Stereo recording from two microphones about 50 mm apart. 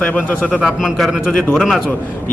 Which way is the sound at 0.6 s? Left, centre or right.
Centre.